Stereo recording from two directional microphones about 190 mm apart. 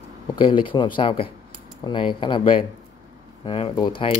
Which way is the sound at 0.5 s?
25° left (ahead or behind).